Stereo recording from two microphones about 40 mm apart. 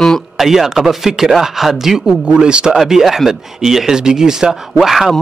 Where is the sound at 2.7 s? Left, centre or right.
Centre.